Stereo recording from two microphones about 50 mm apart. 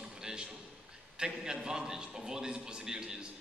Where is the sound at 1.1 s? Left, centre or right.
Centre.